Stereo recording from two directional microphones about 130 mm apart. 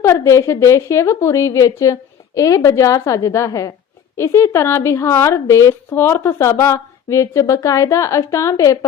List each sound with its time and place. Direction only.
0.0 s a woman's voice: 20° left (ahead or behind)